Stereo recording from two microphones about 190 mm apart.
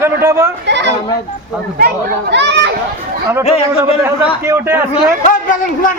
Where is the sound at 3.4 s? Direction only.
30° left (ahead or behind).